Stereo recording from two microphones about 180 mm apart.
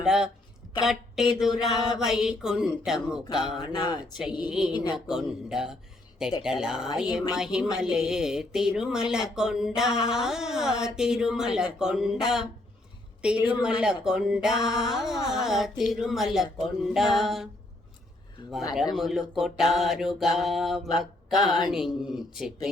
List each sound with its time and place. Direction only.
0.0 s a woman's voice: 5° right (ahead or behind)
3.7 s speech: 20° left (ahead or behind)
4.9 s speech: 5° right (ahead or behind)
18.9 s speech: centre (ahead or behind)